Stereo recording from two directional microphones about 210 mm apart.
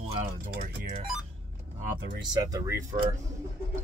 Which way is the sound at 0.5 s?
40° right (ahead or behind).